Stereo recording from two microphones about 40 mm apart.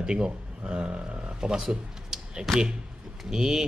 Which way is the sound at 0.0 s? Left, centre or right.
Right.